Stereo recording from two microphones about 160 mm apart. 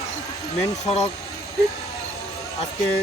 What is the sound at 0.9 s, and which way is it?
Speech, 40° left (ahead or behind).